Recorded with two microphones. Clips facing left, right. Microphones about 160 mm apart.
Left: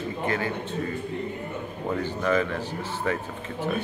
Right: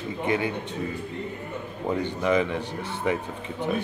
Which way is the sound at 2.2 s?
15° right (ahead or behind).